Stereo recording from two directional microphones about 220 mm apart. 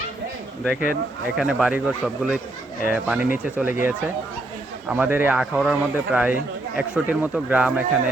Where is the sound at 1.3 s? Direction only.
5° right (ahead or behind).